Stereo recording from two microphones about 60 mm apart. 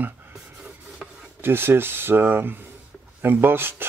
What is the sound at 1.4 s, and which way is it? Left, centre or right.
Speech, right.